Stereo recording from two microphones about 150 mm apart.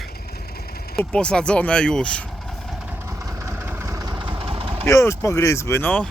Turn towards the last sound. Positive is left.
turn(degrees=10)  # may be behind; listen again after turning